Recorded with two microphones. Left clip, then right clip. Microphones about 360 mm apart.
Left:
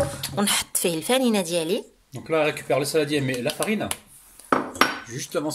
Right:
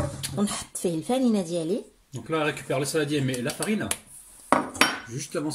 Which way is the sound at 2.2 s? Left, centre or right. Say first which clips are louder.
Left 5 dB; centre.